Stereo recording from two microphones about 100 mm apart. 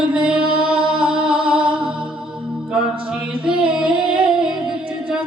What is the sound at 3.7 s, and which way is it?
Music, 10° right (ahead or behind).